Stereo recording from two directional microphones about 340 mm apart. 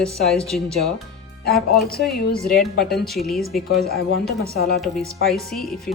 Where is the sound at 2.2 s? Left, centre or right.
Left.